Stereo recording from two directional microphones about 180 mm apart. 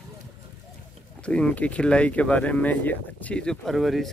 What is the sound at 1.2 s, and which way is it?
Speech, 5° left (ahead or behind).